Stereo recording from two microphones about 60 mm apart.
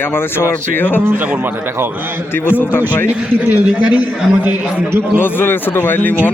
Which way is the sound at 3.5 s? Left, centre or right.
Right.